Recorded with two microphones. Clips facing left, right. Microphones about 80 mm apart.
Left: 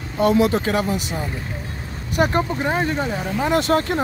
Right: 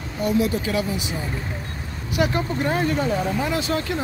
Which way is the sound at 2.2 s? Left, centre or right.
Left.